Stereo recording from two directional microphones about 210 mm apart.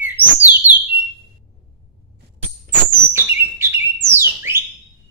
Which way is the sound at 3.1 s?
10° right (ahead or behind).